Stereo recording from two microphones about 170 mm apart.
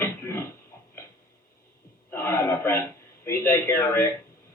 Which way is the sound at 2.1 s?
15° left (ahead or behind).